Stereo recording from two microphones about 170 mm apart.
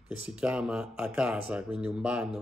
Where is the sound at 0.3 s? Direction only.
5° right (ahead or behind).